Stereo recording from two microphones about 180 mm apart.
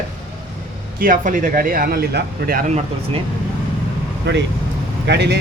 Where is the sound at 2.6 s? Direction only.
40° right (ahead or behind).